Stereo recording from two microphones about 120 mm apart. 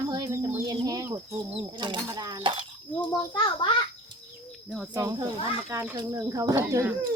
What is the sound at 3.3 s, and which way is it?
Speech, 40° left (ahead or behind).